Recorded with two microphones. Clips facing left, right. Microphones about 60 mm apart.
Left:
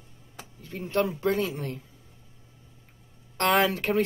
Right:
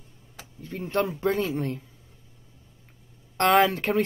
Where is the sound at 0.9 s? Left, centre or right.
Right.